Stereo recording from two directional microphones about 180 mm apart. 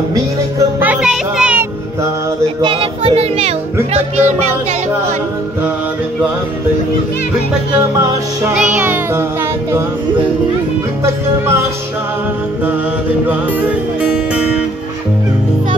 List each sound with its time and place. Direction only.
0.1 s music: 15° right (ahead or behind)
2.6 s a child's voice: 30° right (ahead or behind)
8.7 s music: 10° right (ahead or behind)